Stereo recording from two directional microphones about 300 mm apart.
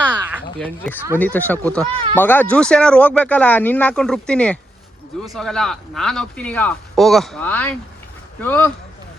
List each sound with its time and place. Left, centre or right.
1.2 s speech: centre